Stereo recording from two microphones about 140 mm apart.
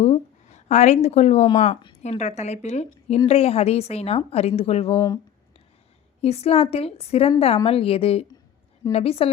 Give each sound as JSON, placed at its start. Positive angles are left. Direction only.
{"t": 0.0, "sound": "a woman's voice", "side_deg": 55}
{"t": 6.2, "sound": "a woman's voice", "side_deg": 45}